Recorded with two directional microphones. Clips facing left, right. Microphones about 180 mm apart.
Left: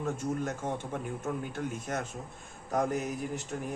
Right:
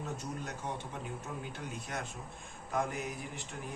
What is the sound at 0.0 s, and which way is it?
Speech, 50° left (ahead or behind).